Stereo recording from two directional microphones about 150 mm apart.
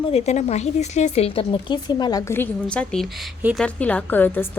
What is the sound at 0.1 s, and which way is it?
Speech, 45° left (ahead or behind).